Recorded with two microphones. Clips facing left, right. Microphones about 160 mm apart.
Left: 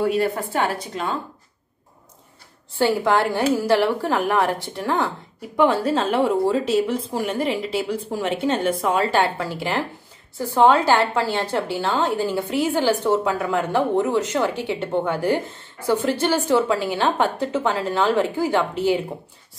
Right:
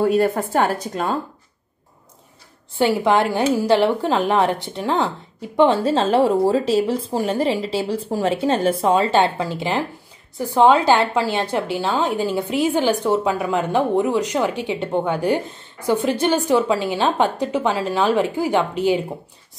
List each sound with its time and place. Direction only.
0.0 s a woman's voice: 45° right (ahead or behind)
2.8 s a woman's voice: 15° right (ahead or behind)